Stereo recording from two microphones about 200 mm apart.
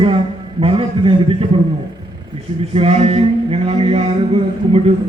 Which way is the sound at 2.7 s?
30° right (ahead or behind).